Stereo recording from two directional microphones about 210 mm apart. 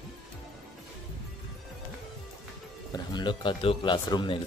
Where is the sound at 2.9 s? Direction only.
20° left (ahead or behind).